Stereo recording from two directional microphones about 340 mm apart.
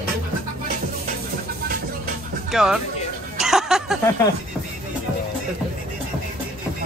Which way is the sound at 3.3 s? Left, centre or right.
Centre.